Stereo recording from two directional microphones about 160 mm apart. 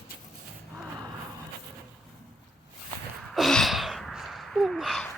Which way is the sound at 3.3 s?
Centre (ahead or behind).